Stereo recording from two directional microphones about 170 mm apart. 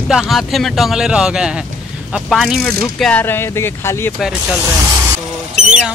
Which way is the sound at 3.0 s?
10° left (ahead or behind).